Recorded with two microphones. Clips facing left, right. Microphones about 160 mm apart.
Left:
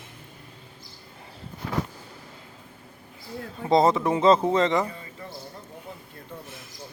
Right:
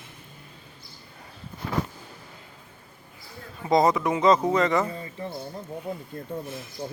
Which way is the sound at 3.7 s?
30° left (ahead or behind).